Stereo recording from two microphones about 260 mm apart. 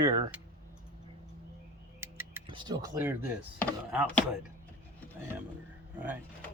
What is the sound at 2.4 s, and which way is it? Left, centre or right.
Speech, centre.